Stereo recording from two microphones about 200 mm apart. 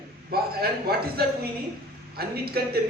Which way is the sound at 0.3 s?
50° right (ahead or behind).